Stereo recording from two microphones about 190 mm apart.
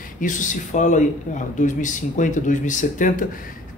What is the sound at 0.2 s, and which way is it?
Speech, 40° left (ahead or behind).